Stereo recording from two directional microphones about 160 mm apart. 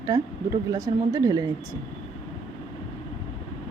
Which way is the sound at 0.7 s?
20° right (ahead or behind).